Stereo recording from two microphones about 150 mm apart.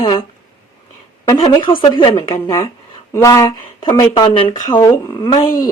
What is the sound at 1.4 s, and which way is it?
A woman's voice, 35° left (ahead or behind).